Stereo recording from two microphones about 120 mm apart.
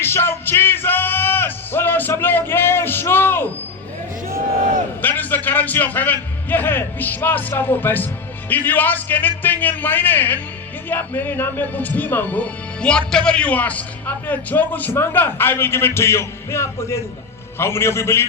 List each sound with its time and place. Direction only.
0.0 s music: 20° left (ahead or behind)
5.0 s a man's voice: 15° left (ahead or behind)